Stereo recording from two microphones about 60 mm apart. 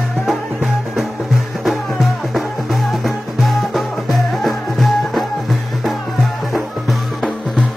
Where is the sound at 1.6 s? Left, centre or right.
Centre.